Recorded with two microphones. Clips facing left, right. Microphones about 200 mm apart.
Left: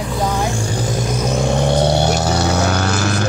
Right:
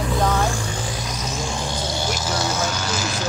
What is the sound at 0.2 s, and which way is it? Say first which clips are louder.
Vehicle: left 2 dB; 10° left (ahead or behind).